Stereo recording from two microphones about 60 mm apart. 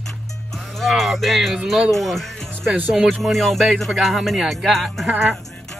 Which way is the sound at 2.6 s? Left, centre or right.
Right.